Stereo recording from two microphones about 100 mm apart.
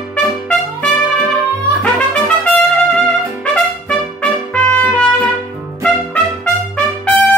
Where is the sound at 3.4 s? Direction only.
10° left (ahead or behind).